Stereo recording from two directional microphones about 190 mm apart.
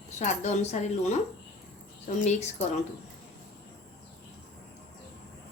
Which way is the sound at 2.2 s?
35° left (ahead or behind).